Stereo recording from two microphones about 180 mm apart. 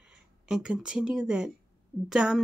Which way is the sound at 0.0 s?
5° right (ahead or behind).